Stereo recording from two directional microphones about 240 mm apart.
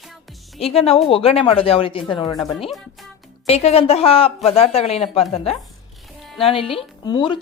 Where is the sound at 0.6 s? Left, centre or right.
Left.